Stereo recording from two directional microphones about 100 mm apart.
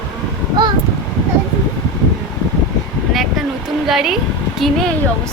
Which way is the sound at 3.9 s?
5° right (ahead or behind).